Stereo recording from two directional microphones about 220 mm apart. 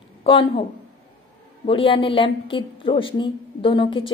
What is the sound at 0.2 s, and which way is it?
Speech, 25° left (ahead or behind).